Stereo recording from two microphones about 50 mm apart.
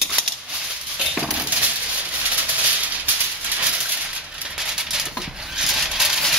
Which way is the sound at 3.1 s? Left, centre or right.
Right.